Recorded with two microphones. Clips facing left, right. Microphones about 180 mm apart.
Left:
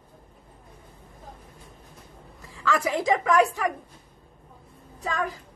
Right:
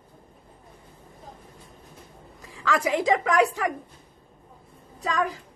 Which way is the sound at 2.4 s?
15° right (ahead or behind).